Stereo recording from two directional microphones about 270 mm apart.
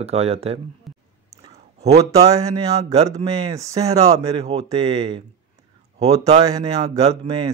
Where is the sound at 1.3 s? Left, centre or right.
Right.